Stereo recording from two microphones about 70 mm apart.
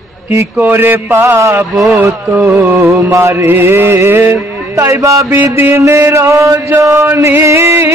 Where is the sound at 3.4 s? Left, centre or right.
Right.